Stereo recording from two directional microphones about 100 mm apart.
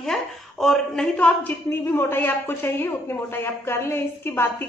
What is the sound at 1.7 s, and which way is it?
A woman's voice, 25° left (ahead or behind).